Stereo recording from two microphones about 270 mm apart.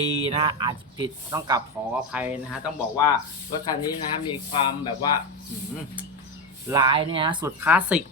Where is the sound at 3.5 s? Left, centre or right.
Centre.